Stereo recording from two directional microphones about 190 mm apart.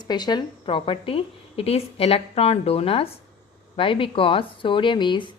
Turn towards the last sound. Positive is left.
turn(degrees=25)  # may be behind; listen again after turning